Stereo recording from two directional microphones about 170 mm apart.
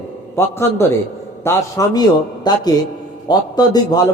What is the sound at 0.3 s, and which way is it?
A man's voice, 15° left (ahead or behind).